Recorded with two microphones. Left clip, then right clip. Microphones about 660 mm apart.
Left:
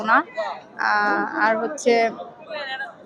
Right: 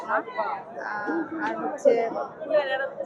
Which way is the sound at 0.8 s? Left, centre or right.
Left.